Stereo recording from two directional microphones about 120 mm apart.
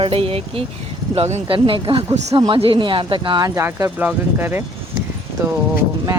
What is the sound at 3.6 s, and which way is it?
Speech, 20° right (ahead or behind).